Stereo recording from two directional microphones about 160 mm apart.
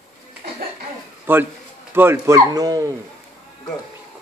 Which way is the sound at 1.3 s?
15° right (ahead or behind).